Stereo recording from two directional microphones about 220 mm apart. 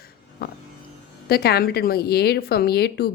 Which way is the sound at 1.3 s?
45° left (ahead or behind).